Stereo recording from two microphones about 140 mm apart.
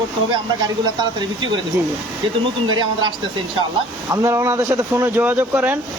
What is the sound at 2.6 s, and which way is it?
Speech, 35° right (ahead or behind).